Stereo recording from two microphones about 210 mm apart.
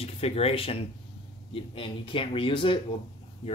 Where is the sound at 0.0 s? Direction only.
30° left (ahead or behind).